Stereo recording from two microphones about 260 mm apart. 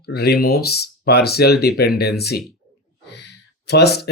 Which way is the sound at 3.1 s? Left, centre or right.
Left.